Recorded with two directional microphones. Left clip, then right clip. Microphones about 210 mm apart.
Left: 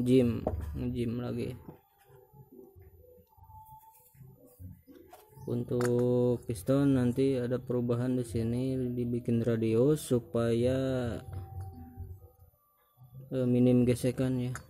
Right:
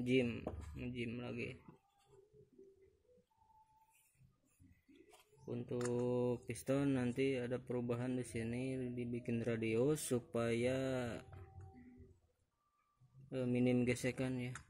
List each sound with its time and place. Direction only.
0.0 s speech: 15° left (ahead or behind)
5.5 s speech: 15° left (ahead or behind)
13.3 s speech: 5° left (ahead or behind)